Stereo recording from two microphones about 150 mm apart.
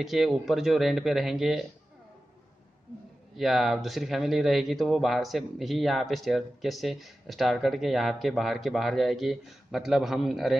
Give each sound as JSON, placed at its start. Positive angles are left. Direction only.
{"t": 0.0, "sound": "speech", "side_deg": 0}
{"t": 3.3, "sound": "speech", "side_deg": 0}